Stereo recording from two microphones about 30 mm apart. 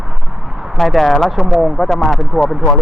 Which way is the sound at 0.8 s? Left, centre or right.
Centre.